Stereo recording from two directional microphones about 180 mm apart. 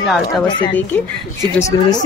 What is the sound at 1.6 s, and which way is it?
Speech, 20° left (ahead or behind).